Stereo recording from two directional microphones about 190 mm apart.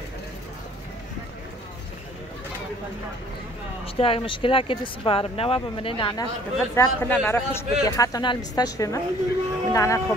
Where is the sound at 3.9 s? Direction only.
30° left (ahead or behind).